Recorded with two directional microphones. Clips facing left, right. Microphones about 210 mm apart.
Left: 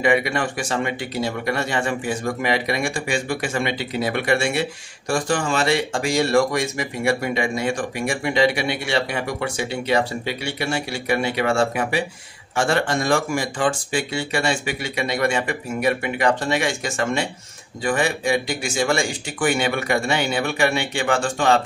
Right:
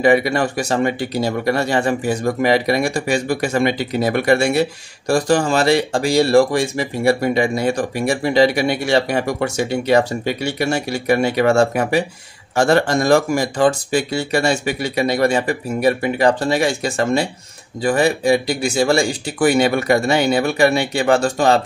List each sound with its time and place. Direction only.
0.0 s speech: 35° right (ahead or behind)